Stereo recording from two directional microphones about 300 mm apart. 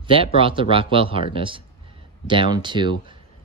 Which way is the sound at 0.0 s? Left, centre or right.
Centre.